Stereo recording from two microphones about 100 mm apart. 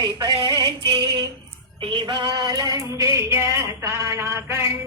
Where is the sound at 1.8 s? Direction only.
60° right (ahead or behind).